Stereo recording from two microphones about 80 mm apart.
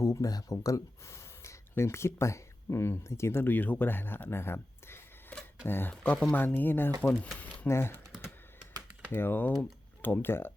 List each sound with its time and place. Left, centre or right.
0.0 s speech: left
5.3 s a sound: centre
5.6 s speech: left
5.9 s speech: centre
6.3 s speech: left
7.7 s speech: left
9.1 s speech: left